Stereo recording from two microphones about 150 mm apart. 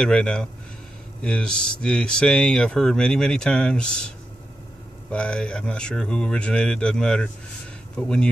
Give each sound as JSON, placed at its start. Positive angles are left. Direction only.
{"t": 0.0, "sound": "speech", "side_deg": 5}
{"t": 5.1, "sound": "speech", "side_deg": 5}